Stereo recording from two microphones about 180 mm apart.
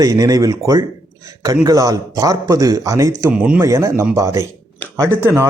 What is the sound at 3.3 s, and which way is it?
Speech, 5° right (ahead or behind).